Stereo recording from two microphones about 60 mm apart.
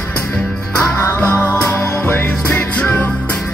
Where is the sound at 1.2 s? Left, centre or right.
Left.